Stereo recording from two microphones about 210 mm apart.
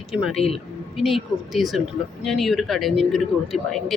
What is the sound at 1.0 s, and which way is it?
Speech, centre (ahead or behind).